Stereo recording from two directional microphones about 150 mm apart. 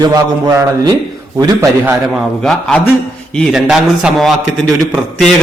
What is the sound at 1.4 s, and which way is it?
Speech, 20° right (ahead or behind).